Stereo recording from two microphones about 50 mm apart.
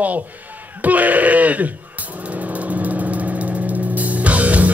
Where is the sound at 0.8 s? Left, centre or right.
Right.